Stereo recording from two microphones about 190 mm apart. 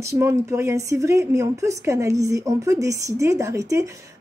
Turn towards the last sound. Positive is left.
turn(degrees=-15)  # may be behind; listen again after turning